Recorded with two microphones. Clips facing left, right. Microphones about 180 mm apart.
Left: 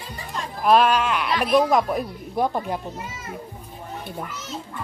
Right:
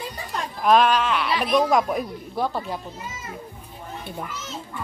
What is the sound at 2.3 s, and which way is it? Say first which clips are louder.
Speech: left 3 dB; 15° left (ahead or behind).